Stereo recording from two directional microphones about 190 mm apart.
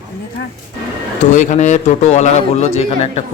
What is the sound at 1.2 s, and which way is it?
A man's voice, 40° left (ahead or behind).